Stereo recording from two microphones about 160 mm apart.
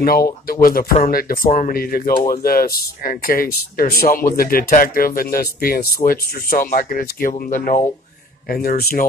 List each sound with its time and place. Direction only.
0.0 s speech: 70° left (ahead or behind); by 7.8 s 50° left (ahead or behind)
8.5 s speech: 70° left (ahead or behind)